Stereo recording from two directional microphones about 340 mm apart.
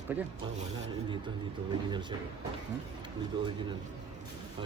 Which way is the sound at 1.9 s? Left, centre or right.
Centre.